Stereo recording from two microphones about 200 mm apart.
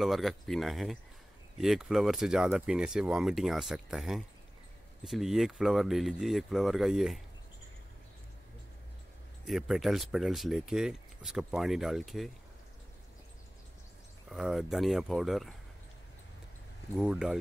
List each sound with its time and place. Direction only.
0.0 s speech: centre (ahead or behind)
9.5 s speech: centre (ahead or behind)
14.3 s speech: centre (ahead or behind)
16.9 s speech: 5° right (ahead or behind)